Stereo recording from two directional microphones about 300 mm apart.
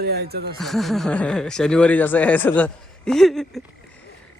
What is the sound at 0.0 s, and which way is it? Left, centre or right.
Speech, right.